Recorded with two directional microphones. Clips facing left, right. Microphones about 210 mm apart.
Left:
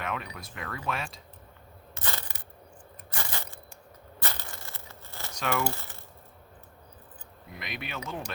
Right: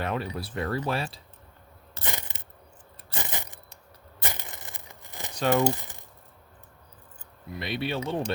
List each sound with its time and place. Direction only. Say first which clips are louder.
0.0 s speech: right 6 dB; 35° right (ahead or behind)
2.0 s a sound: right 2 dB; 20° right (ahead or behind)
4.2 s tearing: right 1 dB; 20° right (ahead or behind)
5.5 s speech: right 7 dB; 15° right (ahead or behind)
7.6 s speech: right 9 dB; 30° right (ahead or behind)